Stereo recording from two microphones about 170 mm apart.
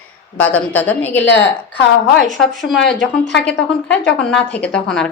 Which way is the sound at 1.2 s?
90° left.